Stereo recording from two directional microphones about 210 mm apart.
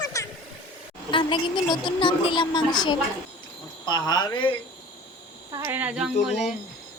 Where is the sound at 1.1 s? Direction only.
25° left (ahead or behind).